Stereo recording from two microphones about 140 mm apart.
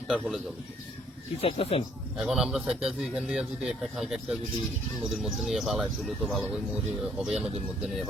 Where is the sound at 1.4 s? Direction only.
45° left (ahead or behind).